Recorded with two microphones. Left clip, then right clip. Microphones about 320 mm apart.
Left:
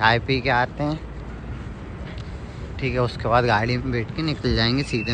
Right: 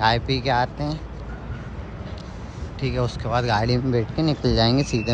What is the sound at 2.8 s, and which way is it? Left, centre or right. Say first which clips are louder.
Speech: left 2 dB; centre.